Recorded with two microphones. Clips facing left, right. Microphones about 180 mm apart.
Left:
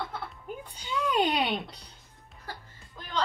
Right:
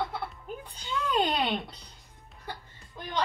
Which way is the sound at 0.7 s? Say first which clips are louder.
Left 1 dB; 10° left (ahead or behind).